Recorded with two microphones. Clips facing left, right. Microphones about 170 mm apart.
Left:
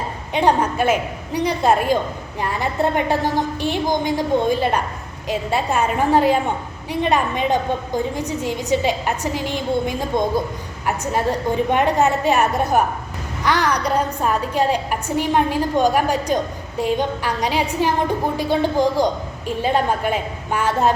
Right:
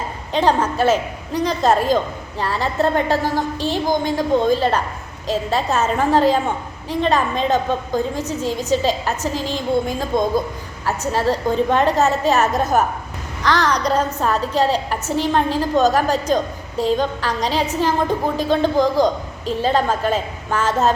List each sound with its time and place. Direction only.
0.3 s a woman's voice: 15° left (ahead or behind)